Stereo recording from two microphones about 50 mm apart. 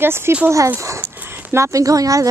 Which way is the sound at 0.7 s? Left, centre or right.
Right.